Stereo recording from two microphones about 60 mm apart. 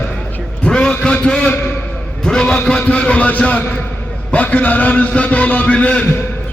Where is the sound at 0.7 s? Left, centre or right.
Centre.